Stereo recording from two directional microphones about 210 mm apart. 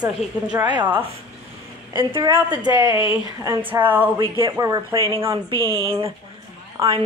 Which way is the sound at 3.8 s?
10° right (ahead or behind).